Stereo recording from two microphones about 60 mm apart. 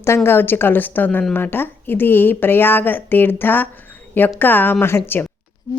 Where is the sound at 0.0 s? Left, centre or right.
Left.